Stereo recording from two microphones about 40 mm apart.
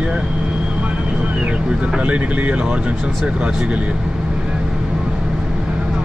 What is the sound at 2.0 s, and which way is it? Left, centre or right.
Speech, right.